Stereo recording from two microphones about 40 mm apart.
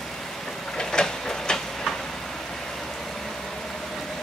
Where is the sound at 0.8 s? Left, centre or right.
Centre.